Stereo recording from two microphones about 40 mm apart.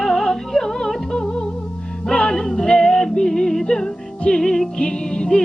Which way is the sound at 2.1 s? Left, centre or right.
Centre.